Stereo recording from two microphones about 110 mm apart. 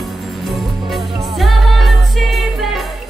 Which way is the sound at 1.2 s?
Centre (ahead or behind).